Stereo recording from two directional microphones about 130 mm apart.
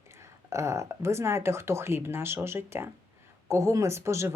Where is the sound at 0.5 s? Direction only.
25° right (ahead or behind).